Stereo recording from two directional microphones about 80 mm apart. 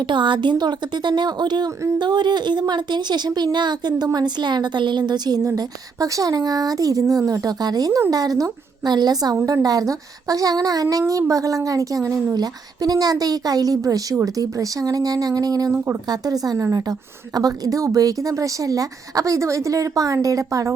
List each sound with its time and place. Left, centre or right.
0.0 s a woman's voice: right
5.5 s a woman's voice: right